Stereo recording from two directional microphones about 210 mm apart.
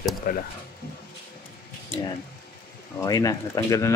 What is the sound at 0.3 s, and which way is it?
Speech, 40° left (ahead or behind).